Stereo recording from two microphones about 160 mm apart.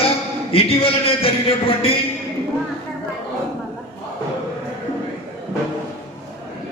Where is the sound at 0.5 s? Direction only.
35° left (ahead or behind).